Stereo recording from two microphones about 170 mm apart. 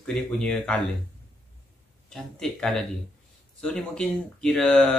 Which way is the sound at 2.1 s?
5° left (ahead or behind).